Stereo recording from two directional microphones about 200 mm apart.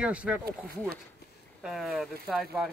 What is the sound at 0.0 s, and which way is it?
Speech, 5° right (ahead or behind).